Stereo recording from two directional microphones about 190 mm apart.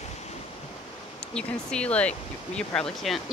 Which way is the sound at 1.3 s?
5° left (ahead or behind).